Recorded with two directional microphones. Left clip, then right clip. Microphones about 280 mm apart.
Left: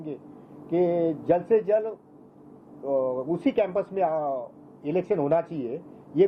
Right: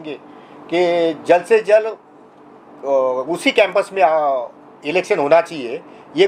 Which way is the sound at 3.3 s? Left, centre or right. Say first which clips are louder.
Right 11 dB; centre.